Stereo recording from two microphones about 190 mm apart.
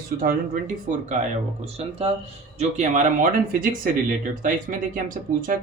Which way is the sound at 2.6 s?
40° right (ahead or behind).